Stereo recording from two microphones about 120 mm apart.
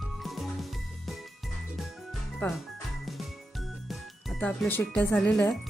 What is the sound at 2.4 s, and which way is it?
Speech, 15° left (ahead or behind).